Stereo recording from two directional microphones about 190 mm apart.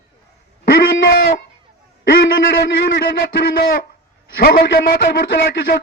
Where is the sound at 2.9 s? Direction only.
55° left (ahead or behind).